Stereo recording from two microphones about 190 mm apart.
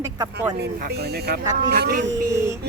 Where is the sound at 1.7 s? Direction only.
55° right (ahead or behind).